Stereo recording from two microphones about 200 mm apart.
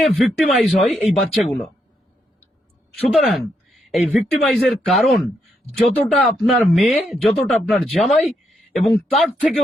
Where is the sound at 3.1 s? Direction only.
Centre (ahead or behind).